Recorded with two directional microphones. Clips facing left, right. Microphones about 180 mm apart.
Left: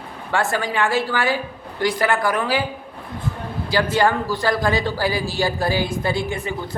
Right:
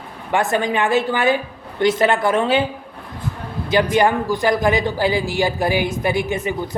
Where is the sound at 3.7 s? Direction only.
20° right (ahead or behind).